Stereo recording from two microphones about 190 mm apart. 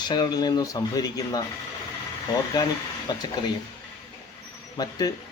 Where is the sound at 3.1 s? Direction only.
20° left (ahead or behind).